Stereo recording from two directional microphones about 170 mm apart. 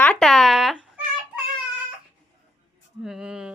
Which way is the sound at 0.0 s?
5° left (ahead or behind).